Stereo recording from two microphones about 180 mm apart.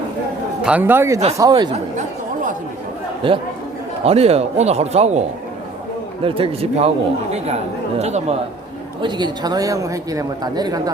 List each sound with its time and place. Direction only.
0.6 s a man's voice: 10° right (ahead or behind)
1.7 s chatter: 45° right (ahead or behind)
3.2 s a man's voice: 30° right (ahead or behind)
6.2 s speech: 30° right (ahead or behind)
9.0 s a man's voice: 25° right (ahead or behind)